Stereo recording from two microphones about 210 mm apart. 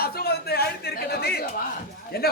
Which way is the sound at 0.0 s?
45° left (ahead or behind).